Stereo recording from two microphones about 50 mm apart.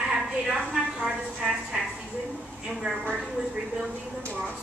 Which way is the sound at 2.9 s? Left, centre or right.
Right.